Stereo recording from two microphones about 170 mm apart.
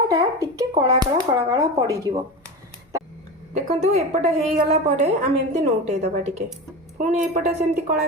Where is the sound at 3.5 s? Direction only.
40° right (ahead or behind).